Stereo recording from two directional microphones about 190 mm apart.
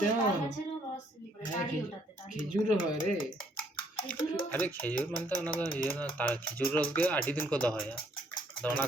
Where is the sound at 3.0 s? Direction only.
45° left (ahead or behind).